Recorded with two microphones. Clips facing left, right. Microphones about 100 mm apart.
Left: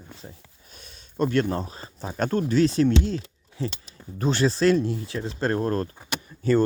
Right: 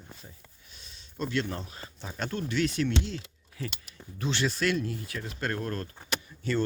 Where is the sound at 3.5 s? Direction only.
30° left (ahead or behind).